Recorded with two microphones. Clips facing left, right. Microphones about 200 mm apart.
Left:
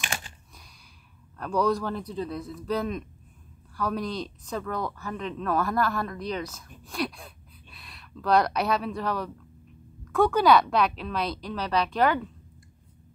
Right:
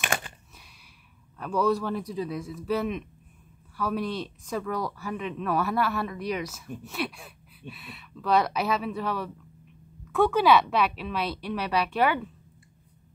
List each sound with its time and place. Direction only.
0.0 s computer keyboard: 55° right (ahead or behind)
1.4 s speech: 5° right (ahead or behind)